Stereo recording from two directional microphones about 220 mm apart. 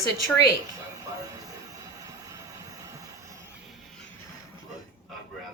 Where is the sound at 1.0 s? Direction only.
15° right (ahead or behind).